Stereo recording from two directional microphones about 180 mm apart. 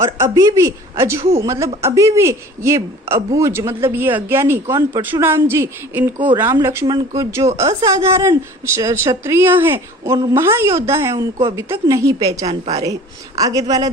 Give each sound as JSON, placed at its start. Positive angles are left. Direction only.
{"t": 0.2, "sound": "speech", "side_deg": -15}
{"t": 12.5, "sound": "a woman's voice", "side_deg": -35}
{"t": 12.8, "sound": "speech", "side_deg": -20}